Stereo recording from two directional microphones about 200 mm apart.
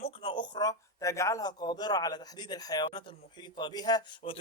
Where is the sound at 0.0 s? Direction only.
25° left (ahead or behind).